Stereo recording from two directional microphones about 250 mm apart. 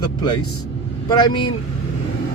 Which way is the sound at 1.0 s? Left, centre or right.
Centre.